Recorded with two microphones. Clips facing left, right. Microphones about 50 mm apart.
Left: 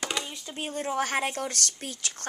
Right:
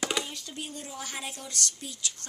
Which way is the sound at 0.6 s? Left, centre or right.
Left.